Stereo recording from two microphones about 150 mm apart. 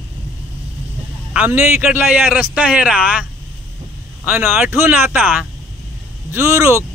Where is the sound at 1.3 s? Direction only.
10° right (ahead or behind).